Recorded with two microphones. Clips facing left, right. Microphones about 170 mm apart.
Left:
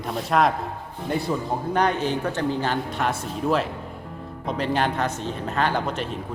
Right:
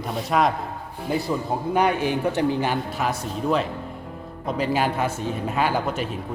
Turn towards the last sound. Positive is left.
turn(degrees=-5)  # may be behind; listen again after turning